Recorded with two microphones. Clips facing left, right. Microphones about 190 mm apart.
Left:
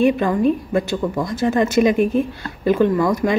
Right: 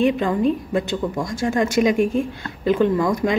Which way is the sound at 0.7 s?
15° right (ahead or behind).